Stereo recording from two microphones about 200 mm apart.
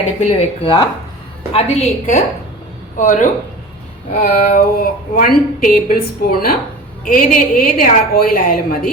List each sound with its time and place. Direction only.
0.2 s a woman's voice: 30° left (ahead or behind); by 8.9 s 45° left (ahead or behind)